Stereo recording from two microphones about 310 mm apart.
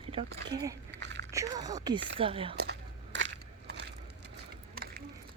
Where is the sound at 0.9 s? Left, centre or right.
Right.